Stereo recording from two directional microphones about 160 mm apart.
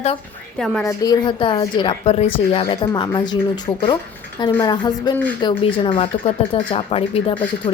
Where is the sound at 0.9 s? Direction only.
20° left (ahead or behind).